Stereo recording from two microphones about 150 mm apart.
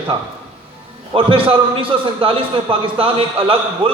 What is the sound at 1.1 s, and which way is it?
A man's voice, 35° right (ahead or behind).